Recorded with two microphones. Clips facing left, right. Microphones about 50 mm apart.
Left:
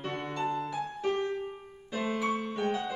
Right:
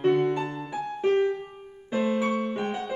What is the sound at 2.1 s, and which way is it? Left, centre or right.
Music, centre.